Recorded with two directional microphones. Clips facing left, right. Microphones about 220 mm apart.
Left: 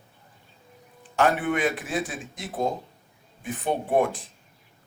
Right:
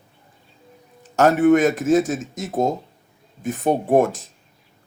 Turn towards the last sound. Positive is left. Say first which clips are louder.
# right 6 dB
turn(degrees=-45)  # may be behind; listen again after turning